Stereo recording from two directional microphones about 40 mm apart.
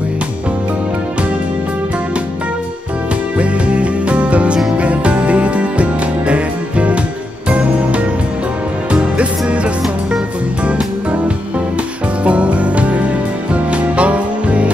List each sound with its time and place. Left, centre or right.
3.3 s music: right